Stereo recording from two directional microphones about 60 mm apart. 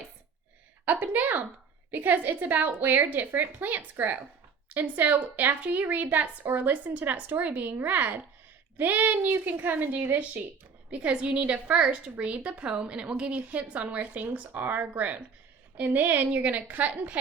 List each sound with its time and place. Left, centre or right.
0.9 s a woman's voice: right
10.9 s a woman's voice: centre